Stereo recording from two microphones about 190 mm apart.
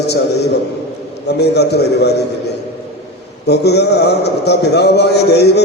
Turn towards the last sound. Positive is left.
turn(degrees=60)  # may be behind; listen again after turning